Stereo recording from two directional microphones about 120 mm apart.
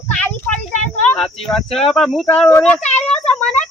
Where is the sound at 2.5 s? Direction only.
20° left (ahead or behind).